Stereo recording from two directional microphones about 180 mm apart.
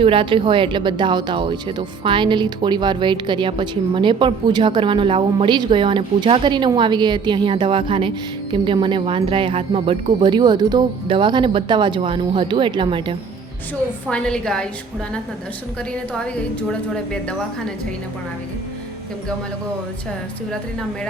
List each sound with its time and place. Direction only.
0.0 s speech: 30° right (ahead or behind)
14.1 s a woman's voice: 5° left (ahead or behind)
16.1 s a woman's voice: 5° left (ahead or behind)